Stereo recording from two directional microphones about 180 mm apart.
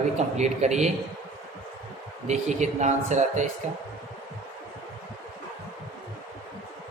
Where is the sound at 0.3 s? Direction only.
40° right (ahead or behind).